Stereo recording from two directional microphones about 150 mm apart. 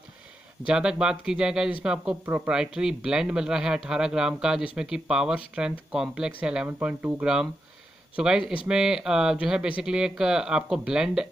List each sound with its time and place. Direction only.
0.7 s speech: 5° right (ahead or behind)